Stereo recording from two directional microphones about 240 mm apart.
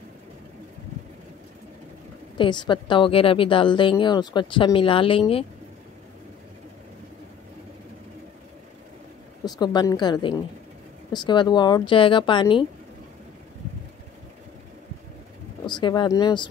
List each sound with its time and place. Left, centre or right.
2.3 s a woman's voice: centre
9.4 s a woman's voice: centre
15.6 s speech: centre